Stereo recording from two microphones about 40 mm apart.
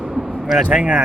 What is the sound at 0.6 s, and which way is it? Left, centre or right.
Speech, right.